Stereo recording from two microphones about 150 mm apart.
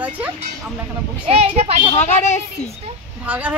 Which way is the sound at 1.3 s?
40° right (ahead or behind).